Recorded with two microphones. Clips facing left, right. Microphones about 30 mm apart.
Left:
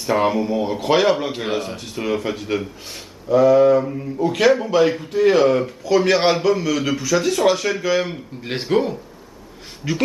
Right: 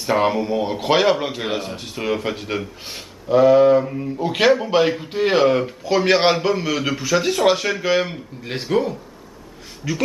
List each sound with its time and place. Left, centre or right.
0.0 s a man's voice: centre
3.3 s a sound: right
3.8 s a man's voice: centre
4.2 s a sound: right
5.0 s a man's voice: right
8.5 s speech: centre